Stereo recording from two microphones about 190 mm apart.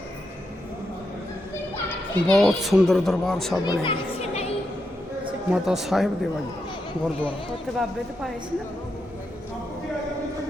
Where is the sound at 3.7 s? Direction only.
30° left (ahead or behind).